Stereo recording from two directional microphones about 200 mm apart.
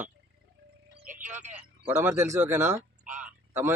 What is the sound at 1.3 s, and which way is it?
Speech, 35° right (ahead or behind).